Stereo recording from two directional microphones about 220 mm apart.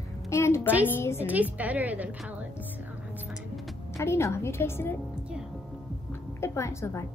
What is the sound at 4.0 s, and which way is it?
Speech, 10° left (ahead or behind).